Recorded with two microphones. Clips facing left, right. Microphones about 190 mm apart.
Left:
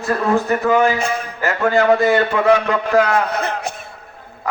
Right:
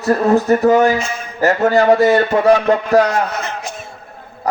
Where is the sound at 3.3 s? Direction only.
60° left (ahead or behind).